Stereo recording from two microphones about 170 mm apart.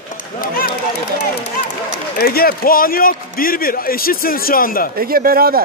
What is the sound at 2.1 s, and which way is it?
A man's voice, 60° left (ahead or behind).